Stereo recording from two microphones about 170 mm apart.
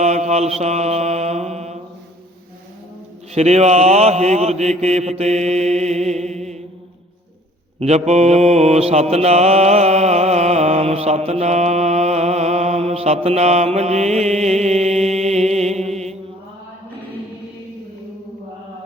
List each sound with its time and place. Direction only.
0.0 s mantra: 40° right (ahead or behind)
3.3 s mantra: 40° right (ahead or behind)
7.8 s mantra: 40° right (ahead or behind)